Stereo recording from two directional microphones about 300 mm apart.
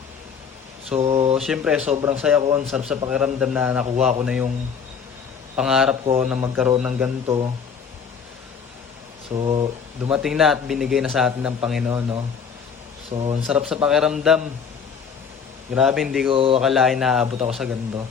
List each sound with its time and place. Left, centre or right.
0.9 s speech: right
1.4 s a man's voice: centre
5.5 s a man's voice: centre
9.3 s speech: centre
10.1 s a man's voice: centre
13.5 s a man's voice: centre
15.7 s a man's voice: centre
16.3 s speech: centre
16.6 s a man's voice: centre